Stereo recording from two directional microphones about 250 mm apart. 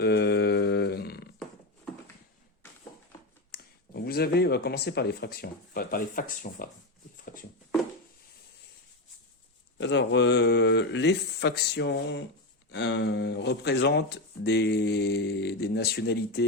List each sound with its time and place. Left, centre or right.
0.0 s a sound: left
3.5 s speech: left
9.7 s speech: left